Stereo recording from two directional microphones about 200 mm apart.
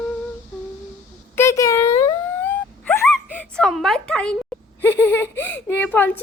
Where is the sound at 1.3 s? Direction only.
15° left (ahead or behind).